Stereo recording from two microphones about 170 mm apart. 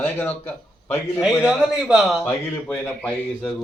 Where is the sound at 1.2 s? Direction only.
5° right (ahead or behind).